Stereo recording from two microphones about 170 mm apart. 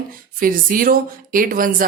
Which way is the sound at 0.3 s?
55° right (ahead or behind).